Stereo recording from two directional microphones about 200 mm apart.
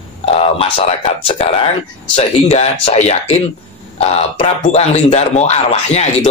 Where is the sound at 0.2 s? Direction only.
30° left (ahead or behind).